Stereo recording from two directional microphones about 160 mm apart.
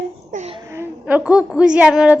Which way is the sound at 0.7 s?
10° right (ahead or behind).